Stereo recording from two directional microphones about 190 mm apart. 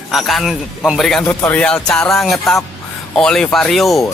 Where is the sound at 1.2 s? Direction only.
10° left (ahead or behind).